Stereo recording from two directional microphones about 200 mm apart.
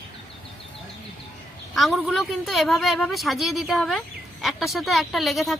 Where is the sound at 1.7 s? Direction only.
Centre (ahead or behind).